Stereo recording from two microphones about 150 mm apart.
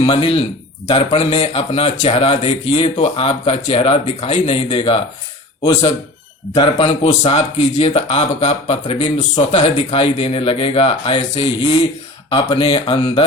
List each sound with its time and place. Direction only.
0.0 s speech: 35° left (ahead or behind)
6.5 s speech: 40° left (ahead or behind)
9.0 s speech: 30° left (ahead or behind)
9.5 s speech: 45° left (ahead or behind)